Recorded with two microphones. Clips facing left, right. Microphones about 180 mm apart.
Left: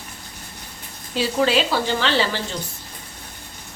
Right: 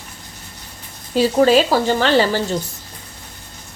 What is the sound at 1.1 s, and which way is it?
Speech, 45° right (ahead or behind).